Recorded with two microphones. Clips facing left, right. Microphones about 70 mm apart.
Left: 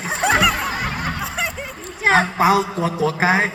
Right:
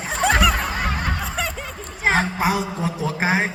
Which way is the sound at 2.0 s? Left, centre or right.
Left.